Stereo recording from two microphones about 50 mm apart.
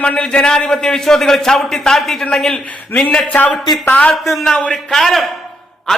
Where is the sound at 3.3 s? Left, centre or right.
Left.